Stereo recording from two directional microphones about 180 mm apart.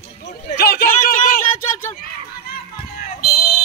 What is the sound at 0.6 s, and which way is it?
Speech, 60° left (ahead or behind).